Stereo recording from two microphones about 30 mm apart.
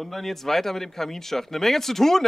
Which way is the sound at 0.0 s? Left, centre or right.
Centre.